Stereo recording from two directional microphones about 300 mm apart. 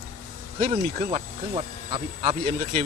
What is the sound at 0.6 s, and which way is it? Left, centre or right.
Speech, right.